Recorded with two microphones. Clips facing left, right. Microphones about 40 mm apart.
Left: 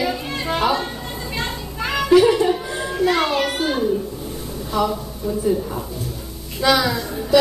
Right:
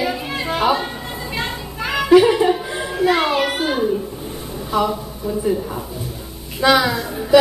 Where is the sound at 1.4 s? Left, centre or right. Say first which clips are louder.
Right 1 dB; centre.